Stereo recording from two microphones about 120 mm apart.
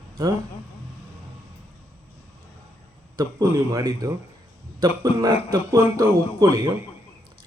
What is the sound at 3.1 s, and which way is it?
A man's voice, 30° right (ahead or behind).